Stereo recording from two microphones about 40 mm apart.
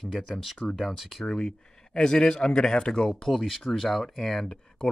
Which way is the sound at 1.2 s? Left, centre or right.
Left.